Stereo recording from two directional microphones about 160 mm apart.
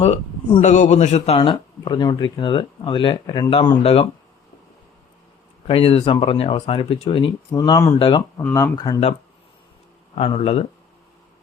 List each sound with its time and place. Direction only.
0.6 s speech: 50° left (ahead or behind)
5.6 s speech: 35° left (ahead or behind)
7.5 s speech: 20° left (ahead or behind)
7.9 s speech: 35° left (ahead or behind)
8.4 s speech: 15° left (ahead or behind)
10.2 s speech: 35° left (ahead or behind)